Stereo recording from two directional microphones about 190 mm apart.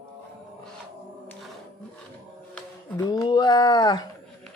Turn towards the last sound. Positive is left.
turn(degrees=25)  # may be behind; listen again after turning